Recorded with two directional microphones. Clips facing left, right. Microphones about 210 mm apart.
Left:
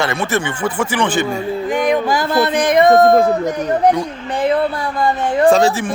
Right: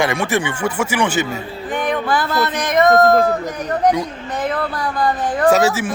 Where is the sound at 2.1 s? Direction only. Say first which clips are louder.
Left 4 dB; 50° left (ahead or behind).